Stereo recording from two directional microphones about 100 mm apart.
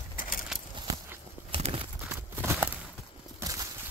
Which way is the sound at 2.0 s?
20° right (ahead or behind).